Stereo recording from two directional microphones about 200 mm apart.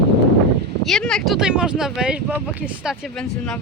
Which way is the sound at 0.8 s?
Centre (ahead or behind).